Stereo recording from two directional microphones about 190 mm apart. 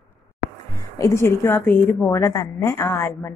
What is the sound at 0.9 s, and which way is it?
A woman's voice, 15° left (ahead or behind).